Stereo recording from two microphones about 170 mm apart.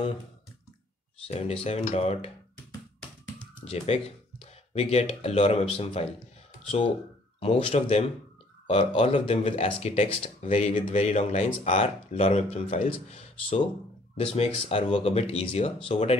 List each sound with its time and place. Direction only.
1.2 s speech: 35° left (ahead or behind)
3.7 s speech: 40° left (ahead or behind)
7.3 s speech: 35° left (ahead or behind)